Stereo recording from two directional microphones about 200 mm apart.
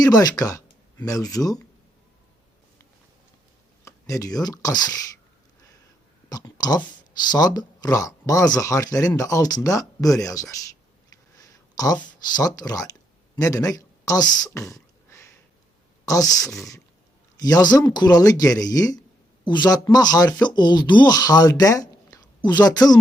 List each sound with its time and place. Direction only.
0.0 s speech: 20° left (ahead or behind)
3.8 s speech: 15° left (ahead or behind)
6.2 s speech: 20° left (ahead or behind)
11.1 s a sound: 15° left (ahead or behind)
12.3 s speech: 20° left (ahead or behind)